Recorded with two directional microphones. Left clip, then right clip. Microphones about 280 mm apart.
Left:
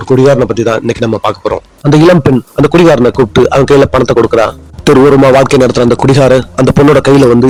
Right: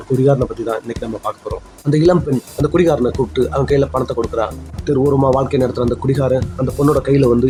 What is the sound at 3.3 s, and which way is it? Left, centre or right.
Speech, left.